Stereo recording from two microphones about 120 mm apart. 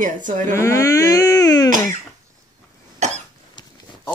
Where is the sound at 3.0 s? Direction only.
70° right (ahead or behind).